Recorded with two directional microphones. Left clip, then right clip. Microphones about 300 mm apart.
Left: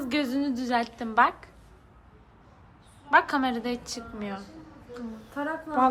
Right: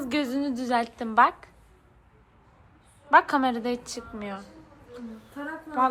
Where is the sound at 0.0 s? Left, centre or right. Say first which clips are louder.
Even; centre.